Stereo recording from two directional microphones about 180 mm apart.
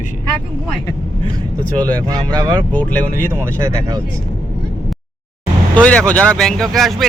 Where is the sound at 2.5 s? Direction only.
10° left (ahead or behind).